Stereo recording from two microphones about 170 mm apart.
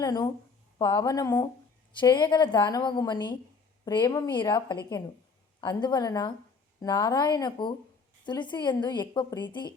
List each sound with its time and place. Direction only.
0.0 s a woman's voice: 25° left (ahead or behind)